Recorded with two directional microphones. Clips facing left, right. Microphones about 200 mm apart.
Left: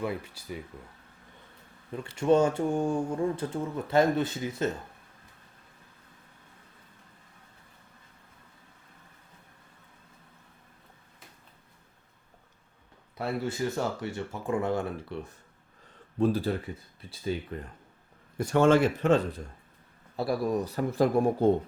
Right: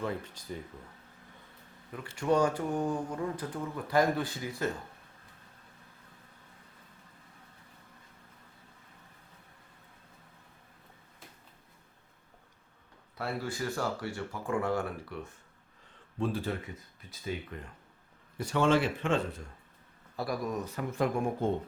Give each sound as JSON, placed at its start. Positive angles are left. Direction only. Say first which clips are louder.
{"t": 0.0, "sound": "speech", "louder": "left 2 dB", "side_deg": 10}
{"t": 1.9, "sound": "speech", "louder": "left 5 dB", "side_deg": 25}
{"t": 13.1, "sound": "speech", "louder": "left 4 dB", "side_deg": 20}
{"t": 16.1, "sound": "speech", "louder": "left 6 dB", "side_deg": 40}
{"t": 18.3, "sound": "speech", "louder": "left 5 dB", "side_deg": 45}